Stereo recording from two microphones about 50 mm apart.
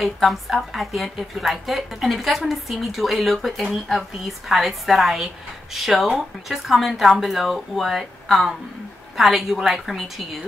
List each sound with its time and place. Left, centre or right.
0.0 s a woman's voice: centre